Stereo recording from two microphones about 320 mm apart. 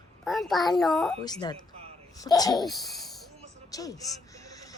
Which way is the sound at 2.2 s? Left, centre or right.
Centre.